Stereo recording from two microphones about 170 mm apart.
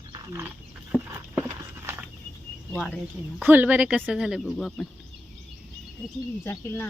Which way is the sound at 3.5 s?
10° right (ahead or behind).